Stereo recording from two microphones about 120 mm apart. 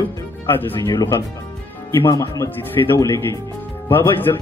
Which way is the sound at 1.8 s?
25° left (ahead or behind).